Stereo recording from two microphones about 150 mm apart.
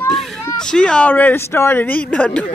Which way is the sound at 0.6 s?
5° left (ahead or behind).